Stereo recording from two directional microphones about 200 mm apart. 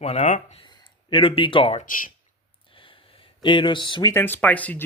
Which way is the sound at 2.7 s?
25° left (ahead or behind).